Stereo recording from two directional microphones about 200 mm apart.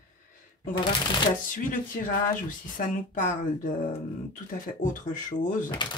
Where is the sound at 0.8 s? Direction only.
20° left (ahead or behind).